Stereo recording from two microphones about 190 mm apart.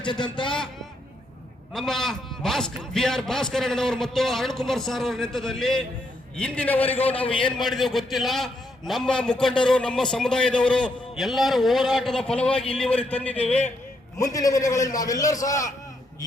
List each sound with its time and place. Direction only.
0.0 s a man's voice: 25° left (ahead or behind)
1.7 s a man's voice: centre (ahead or behind)
7.0 s a man's voice: 30° left (ahead or behind)
7.4 s a man's voice: centre (ahead or behind); by 15.7 s 20° left (ahead or behind)